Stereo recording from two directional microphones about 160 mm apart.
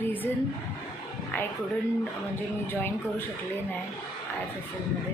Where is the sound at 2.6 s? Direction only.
15° left (ahead or behind).